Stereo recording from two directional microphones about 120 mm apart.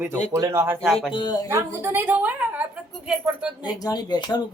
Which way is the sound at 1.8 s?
15° right (ahead or behind).